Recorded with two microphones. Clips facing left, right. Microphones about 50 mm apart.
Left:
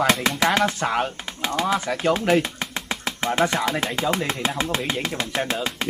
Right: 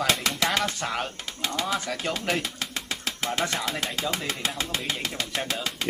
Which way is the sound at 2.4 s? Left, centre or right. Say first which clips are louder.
Left 4 dB; left.